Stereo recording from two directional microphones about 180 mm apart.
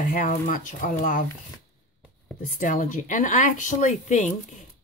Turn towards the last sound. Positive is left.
turn(degrees=45)  # may be behind; listen again after turning